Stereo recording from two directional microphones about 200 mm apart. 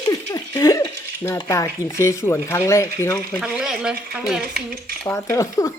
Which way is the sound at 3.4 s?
5° right (ahead or behind).